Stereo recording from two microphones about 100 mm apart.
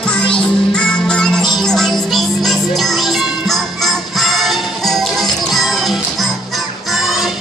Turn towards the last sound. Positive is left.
turn(degrees=-5)  # may be behind; listen again after turning